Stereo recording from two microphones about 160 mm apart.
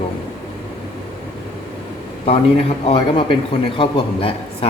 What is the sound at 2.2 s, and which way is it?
Speech, 40° left (ahead or behind).